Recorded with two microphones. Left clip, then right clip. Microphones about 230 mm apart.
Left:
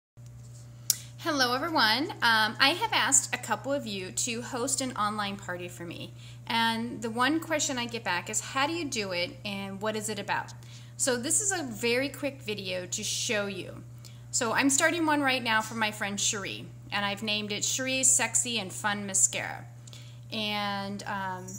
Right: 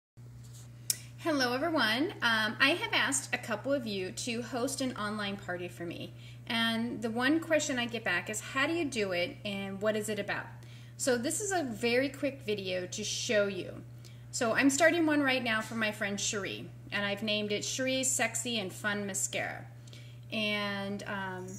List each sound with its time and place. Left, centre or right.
0.8 s speech: centre
11.5 s speech: centre
12.9 s speech: left
13.3 s speech: centre